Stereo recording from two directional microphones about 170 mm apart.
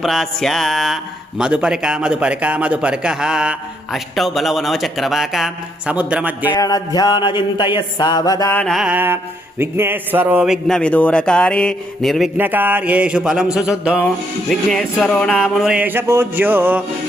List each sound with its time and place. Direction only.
0.0 s speech: centre (ahead or behind)
6.5 s a sound: 20° left (ahead or behind)
8.5 s speech: centre (ahead or behind)
12.4 s speech: 10° right (ahead or behind)
14.5 s speech: 5° left (ahead or behind); by 16.8 s 10° right (ahead or behind)